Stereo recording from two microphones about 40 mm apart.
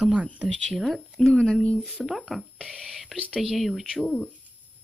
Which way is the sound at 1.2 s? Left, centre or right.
Centre.